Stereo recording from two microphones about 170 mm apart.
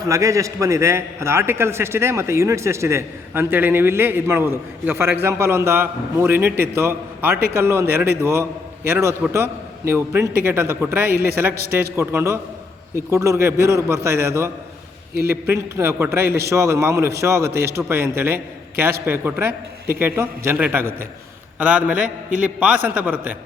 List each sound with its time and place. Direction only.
0.1 s a man's voice: 20° right (ahead or behind)